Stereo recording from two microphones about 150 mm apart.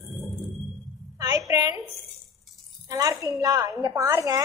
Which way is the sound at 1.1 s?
25° right (ahead or behind).